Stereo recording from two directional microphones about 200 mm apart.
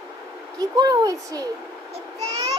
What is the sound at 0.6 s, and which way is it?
Speech, 20° right (ahead or behind).